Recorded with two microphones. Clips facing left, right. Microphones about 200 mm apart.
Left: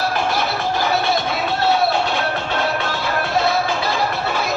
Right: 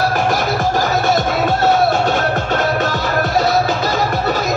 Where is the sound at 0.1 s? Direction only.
45° right (ahead or behind).